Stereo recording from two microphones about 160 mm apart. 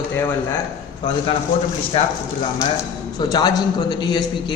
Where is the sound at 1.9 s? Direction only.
40° left (ahead or behind).